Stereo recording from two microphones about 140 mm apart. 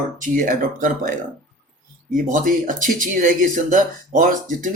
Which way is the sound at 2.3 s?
70° right (ahead or behind).